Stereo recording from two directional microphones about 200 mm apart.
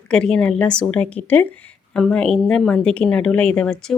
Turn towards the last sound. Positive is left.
turn(degrees=5)  # may be behind; listen again after turning